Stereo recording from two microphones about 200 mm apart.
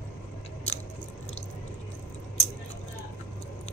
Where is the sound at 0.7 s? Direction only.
35° left (ahead or behind).